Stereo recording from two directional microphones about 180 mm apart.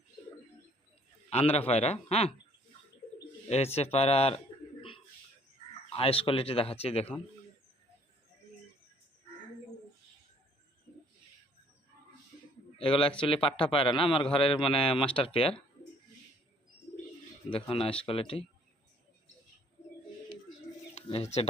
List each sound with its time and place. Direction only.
1.3 s speech: 35° left (ahead or behind)
3.5 s speech: 35° left (ahead or behind)
5.9 s speech: 30° left (ahead or behind)
12.7 s a man's voice: 30° left (ahead or behind)
17.5 s speech: 30° left (ahead or behind)
20.9 s speech: 35° left (ahead or behind)